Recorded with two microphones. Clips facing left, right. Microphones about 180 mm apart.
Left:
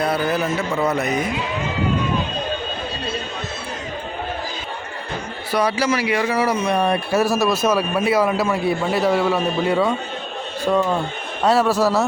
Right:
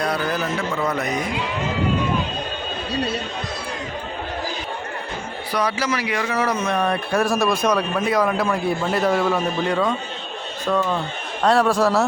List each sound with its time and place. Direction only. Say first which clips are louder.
5.5 s a man's voice: left 3 dB; 30° left (ahead or behind)
6.3 s a man's voice: left 2 dB; 10° left (ahead or behind)
11.4 s speech: even; 5° left (ahead or behind)